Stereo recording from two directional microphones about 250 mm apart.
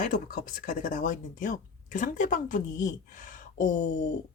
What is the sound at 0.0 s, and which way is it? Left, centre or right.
A woman's voice, left.